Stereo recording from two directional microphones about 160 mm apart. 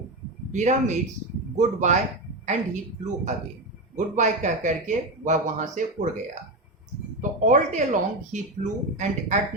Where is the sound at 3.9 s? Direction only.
50° right (ahead or behind).